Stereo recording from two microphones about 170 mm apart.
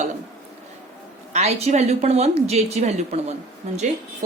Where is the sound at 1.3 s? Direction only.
40° right (ahead or behind).